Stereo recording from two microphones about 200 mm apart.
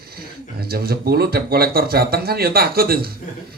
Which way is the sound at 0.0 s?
50° right (ahead or behind).